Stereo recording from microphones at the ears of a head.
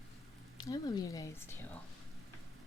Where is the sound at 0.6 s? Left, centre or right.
Left.